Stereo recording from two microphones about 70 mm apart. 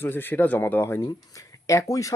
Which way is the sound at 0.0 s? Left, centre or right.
Left.